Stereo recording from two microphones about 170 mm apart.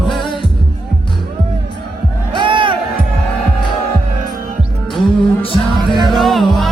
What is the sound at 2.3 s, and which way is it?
Music, 30° right (ahead or behind).